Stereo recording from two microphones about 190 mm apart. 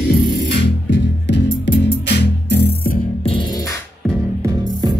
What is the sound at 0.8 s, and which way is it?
Music, 65° left (ahead or behind).